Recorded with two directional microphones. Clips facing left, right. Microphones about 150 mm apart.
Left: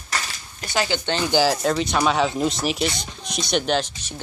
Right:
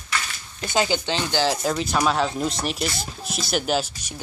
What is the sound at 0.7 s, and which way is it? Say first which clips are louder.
Speech: right 1 dB; 15° right (ahead or behind).